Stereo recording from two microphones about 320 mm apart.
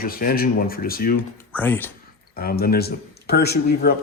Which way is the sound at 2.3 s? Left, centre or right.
Left.